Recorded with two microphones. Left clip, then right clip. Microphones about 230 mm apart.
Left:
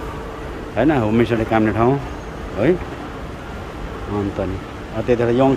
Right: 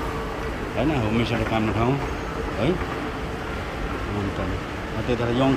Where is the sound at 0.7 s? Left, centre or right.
Centre.